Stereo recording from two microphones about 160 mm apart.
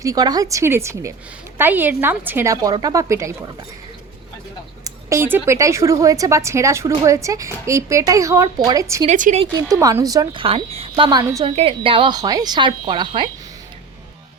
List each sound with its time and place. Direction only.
0.0 s a woman's voice: 25° right (ahead or behind)
4.8 s a woman's voice: 20° right (ahead or behind)
9.0 s speech: 50° right (ahead or behind)
9.4 s a woman's voice: 25° right (ahead or behind)
10.4 s a woman's voice: 35° right (ahead or behind)
11.5 s a woman's voice: 35° right (ahead or behind)